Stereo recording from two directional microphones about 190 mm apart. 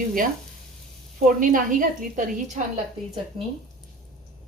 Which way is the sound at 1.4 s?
45° right (ahead or behind).